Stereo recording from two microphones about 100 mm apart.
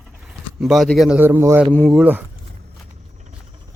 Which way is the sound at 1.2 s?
25° right (ahead or behind).